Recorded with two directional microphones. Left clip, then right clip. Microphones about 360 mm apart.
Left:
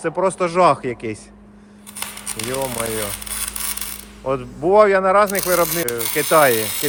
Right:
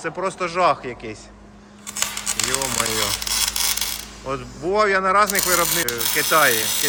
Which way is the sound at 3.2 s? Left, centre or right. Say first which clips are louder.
Right 7 dB; right.